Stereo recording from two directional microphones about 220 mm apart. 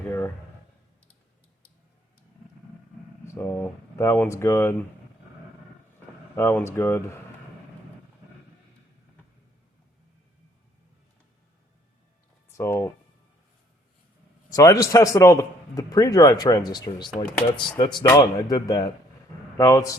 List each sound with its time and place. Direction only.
0.0 s speech: 10° left (ahead or behind)
3.3 s a man's voice: 10° left (ahead or behind)
6.3 s a man's voice: 10° left (ahead or behind)
12.5 s a man's voice: 10° left (ahead or behind)
14.5 s a man's voice: 15° left (ahead or behind)